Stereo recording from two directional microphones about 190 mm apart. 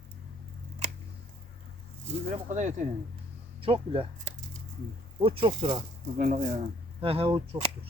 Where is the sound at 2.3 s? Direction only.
40° right (ahead or behind).